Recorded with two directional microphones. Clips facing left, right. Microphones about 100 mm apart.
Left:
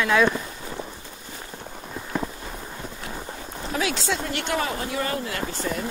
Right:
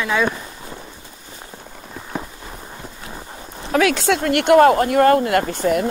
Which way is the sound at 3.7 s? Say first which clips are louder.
Right 9 dB; 65° right (ahead or behind).